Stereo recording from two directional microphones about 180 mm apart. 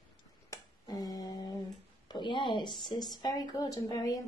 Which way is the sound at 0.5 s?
20° left (ahead or behind).